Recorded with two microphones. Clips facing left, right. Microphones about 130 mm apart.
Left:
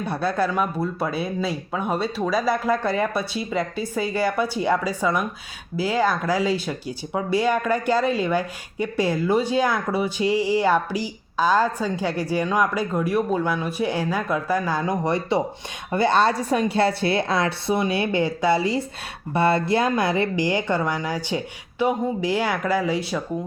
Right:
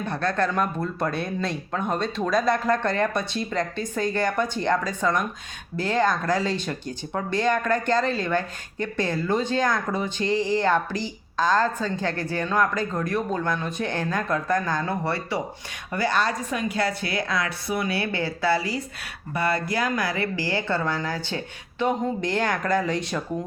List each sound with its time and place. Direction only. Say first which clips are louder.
0.0 s a woman's voice: left 2 dB; 10° left (ahead or behind)